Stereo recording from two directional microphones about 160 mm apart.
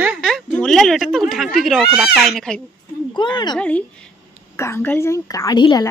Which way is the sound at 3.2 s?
30° left (ahead or behind).